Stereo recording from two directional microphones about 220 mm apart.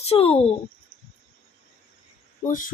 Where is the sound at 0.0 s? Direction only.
25° left (ahead or behind).